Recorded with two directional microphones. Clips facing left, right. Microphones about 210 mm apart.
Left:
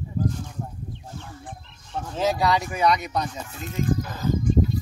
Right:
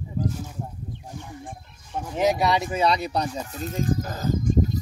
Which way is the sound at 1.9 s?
10° right (ahead or behind).